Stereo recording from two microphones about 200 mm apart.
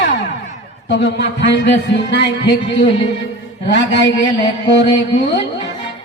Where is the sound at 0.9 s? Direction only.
60° left (ahead or behind).